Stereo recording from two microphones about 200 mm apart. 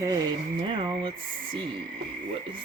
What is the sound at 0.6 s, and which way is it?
Speech, 25° right (ahead or behind).